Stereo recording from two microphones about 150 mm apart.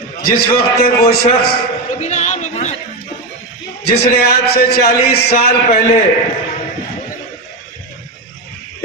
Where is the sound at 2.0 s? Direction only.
50° left (ahead or behind).